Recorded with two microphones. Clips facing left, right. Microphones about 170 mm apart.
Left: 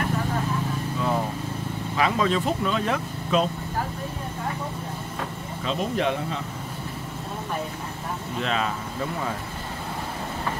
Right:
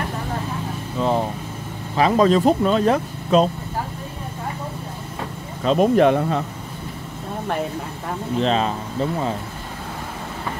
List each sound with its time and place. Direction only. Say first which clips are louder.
0.9 s vehicle: right 6 dB; 30° right (ahead or behind)
2.0 s speech: right 7 dB; 35° right (ahead or behind)
5.6 s speech: right 11 dB; 50° right (ahead or behind)
8.4 s speech: right 7 dB; 30° right (ahead or behind)